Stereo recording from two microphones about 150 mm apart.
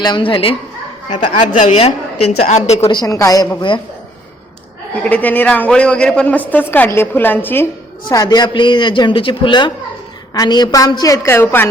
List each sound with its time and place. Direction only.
0.0 s a man's voice: 30° left (ahead or behind)
1.1 s a woman's voice: 50° left (ahead or behind)
2.9 s a woman's voice: 25° left (ahead or behind)
5.0 s a man's voice: 10° left (ahead or behind)
8.1 s a man's voice: 25° left (ahead or behind)